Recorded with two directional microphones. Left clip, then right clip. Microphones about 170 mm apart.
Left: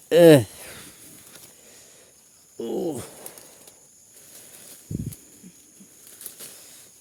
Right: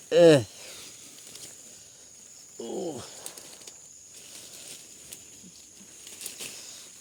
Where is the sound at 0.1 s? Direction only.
75° left (ahead or behind).